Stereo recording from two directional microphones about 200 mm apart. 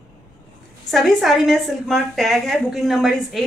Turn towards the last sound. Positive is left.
turn(degrees=0)  # may be behind; listen again after turning